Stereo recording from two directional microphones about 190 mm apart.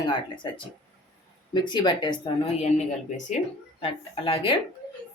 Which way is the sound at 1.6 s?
25° left (ahead or behind).